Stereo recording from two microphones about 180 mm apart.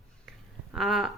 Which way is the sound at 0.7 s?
Centre (ahead or behind).